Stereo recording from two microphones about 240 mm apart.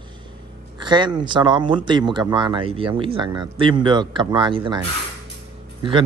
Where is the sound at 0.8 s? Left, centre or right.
Centre.